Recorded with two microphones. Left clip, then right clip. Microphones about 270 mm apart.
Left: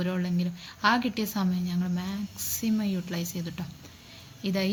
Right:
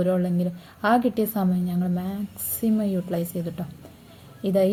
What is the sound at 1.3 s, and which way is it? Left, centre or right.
Speech, centre.